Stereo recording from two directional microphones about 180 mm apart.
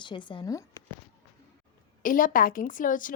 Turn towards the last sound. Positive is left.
turn(degrees=50)  # may be behind; listen again after turning